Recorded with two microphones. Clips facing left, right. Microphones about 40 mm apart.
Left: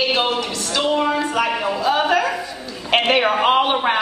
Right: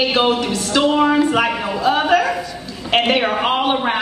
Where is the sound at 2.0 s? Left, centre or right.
Centre.